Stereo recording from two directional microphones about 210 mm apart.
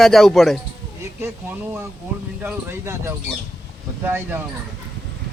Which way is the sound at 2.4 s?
10° right (ahead or behind).